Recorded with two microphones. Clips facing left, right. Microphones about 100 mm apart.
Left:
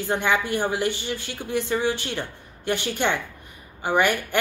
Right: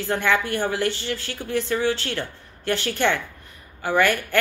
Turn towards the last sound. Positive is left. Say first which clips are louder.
# right 1 dB
turn(degrees=15)  # may be behind; listen again after turning